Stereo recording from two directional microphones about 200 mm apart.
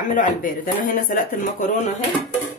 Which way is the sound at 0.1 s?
40° left (ahead or behind).